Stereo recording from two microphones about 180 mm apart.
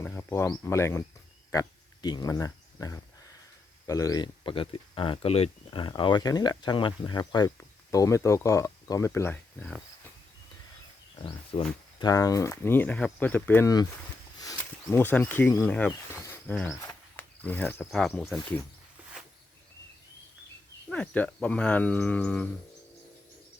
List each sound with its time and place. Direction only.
0.0 s speech: 15° left (ahead or behind)
11.2 s speech: 30° left (ahead or behind)
14.8 s speech: 10° left (ahead or behind)
16.2 s cricket: 10° left (ahead or behind)
16.8 s speech: 10° left (ahead or behind)
20.9 s speech: 5° left (ahead or behind)